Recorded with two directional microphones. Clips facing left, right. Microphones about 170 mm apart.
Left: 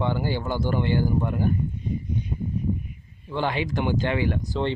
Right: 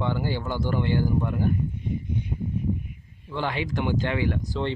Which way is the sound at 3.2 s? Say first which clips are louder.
Left 2 dB; 20° left (ahead or behind).